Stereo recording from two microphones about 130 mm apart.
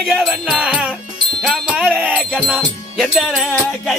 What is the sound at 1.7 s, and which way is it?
Music, 10° right (ahead or behind).